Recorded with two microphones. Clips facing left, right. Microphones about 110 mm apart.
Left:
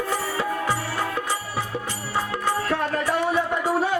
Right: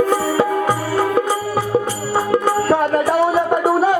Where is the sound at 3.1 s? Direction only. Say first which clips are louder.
Right 5 dB; 50° right (ahead or behind).